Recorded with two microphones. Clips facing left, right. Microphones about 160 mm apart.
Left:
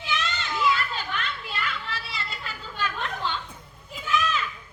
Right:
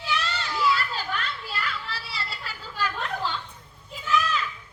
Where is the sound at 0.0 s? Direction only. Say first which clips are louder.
Right 1 dB; 35° right (ahead or behind).